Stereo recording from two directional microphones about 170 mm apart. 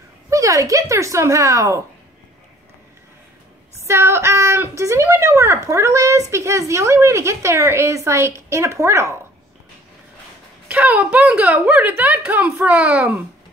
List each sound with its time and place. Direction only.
0.3 s a woman's voice: 20° right (ahead or behind)
3.8 s a woman's voice: 15° right (ahead or behind)
10.7 s a woman's voice: 10° right (ahead or behind)